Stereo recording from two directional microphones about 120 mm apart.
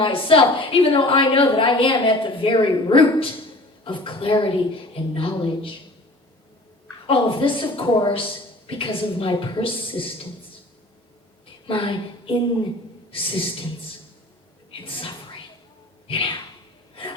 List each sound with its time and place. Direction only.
0.0 s a woman's voice: 50° left (ahead or behind)
7.1 s a woman's voice: 45° left (ahead or behind)
11.6 s a woman's voice: 45° left (ahead or behind)
14.7 s a woman's voice: 50° left (ahead or behind)
16.0 s a sound: 50° left (ahead or behind)